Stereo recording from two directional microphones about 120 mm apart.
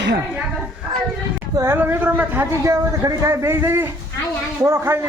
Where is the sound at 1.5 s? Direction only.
25° right (ahead or behind).